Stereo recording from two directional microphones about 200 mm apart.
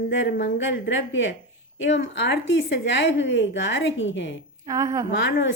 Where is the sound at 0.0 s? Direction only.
60° left (ahead or behind).